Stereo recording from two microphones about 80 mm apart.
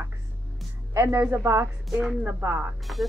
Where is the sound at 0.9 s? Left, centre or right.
Right.